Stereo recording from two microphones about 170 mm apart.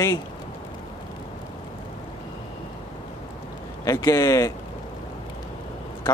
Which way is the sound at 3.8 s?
20° left (ahead or behind).